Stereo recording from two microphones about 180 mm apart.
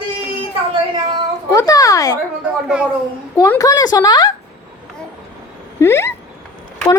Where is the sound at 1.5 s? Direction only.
20° left (ahead or behind).